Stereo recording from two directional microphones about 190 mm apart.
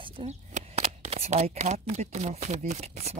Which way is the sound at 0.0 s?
30° right (ahead or behind).